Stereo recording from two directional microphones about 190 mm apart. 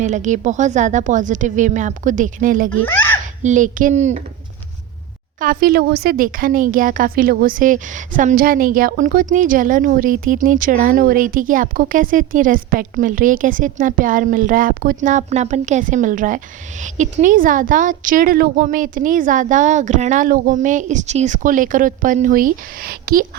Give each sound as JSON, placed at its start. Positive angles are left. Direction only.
{"t": 0.0, "sound": "a woman's voice", "side_deg": -40}
{"t": 2.8, "sound": "baby laughter", "side_deg": 10}
{"t": 3.4, "sound": "a woman's voice", "side_deg": -40}
{"t": 5.4, "sound": "a woman's voice", "side_deg": -50}